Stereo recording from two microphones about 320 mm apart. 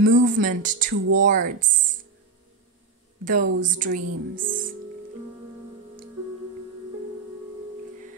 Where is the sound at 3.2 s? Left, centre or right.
Right.